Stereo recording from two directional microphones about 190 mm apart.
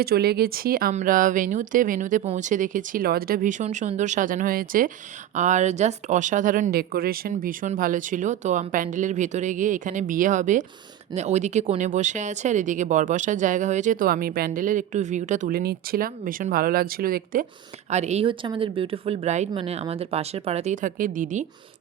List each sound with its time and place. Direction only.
0.0 s speech: 55° right (ahead or behind)
17.9 s speech: 35° right (ahead or behind)